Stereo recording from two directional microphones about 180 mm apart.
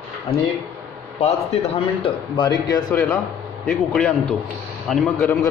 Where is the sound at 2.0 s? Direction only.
25° left (ahead or behind).